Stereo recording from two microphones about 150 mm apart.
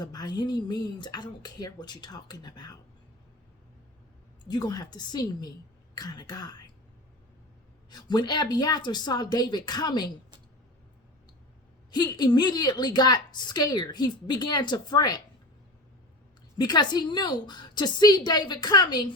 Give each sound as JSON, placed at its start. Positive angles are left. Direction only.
{"t": 0.0, "sound": "a woman's voice", "side_deg": 30}
{"t": 4.4, "sound": "a woman's voice", "side_deg": 25}
{"t": 7.9, "sound": "a woman's voice", "side_deg": 25}
{"t": 11.9, "sound": "a woman's voice", "side_deg": 30}
{"t": 16.6, "sound": "a woman's voice", "side_deg": 30}